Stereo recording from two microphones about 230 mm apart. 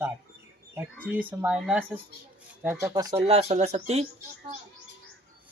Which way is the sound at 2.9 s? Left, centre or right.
Centre.